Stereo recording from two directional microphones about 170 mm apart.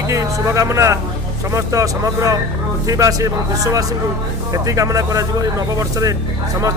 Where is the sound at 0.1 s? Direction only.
15° right (ahead or behind).